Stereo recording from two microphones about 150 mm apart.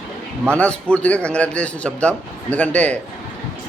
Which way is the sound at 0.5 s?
5° left (ahead or behind).